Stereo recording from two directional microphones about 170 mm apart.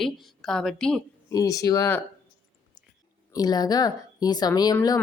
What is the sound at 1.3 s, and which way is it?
Speech, 20° left (ahead or behind).